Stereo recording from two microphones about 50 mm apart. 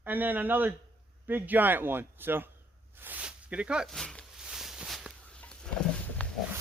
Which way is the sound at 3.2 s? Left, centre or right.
Right.